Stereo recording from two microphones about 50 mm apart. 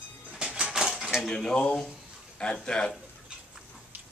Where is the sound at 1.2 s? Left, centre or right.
Centre.